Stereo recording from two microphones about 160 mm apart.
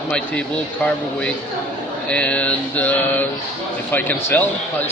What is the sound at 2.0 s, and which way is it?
Speech, 5° left (ahead or behind).